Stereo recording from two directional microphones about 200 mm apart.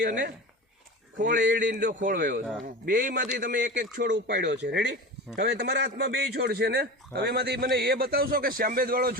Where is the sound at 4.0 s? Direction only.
60° right (ahead or behind).